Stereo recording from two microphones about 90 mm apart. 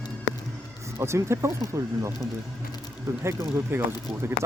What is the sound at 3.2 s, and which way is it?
Speech, 30° right (ahead or behind).